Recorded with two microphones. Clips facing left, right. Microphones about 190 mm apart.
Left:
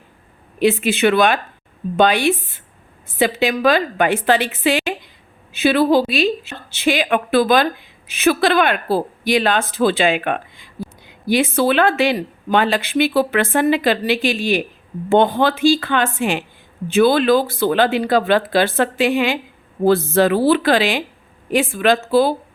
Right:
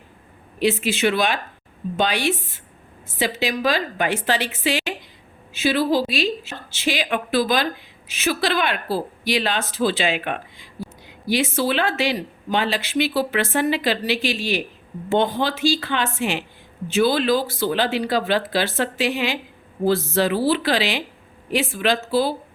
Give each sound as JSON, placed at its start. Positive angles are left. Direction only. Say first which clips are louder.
{"t": 0.6, "sound": "a woman's voice", "louder": "left 5 dB", "side_deg": 55}